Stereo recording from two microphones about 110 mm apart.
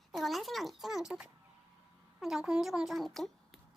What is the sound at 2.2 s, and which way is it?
Speech, 5° right (ahead or behind).